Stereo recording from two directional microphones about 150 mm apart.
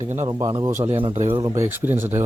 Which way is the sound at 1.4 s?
20° right (ahead or behind).